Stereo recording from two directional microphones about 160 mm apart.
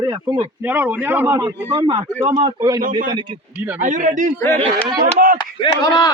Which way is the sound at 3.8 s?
50° right (ahead or behind).